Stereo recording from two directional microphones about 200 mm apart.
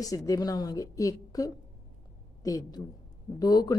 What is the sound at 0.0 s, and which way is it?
A woman's voice, 15° left (ahead or behind).